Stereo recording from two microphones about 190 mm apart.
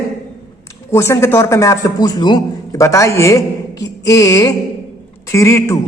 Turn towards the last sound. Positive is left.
turn(degrees=15)  # may be behind; listen again after turning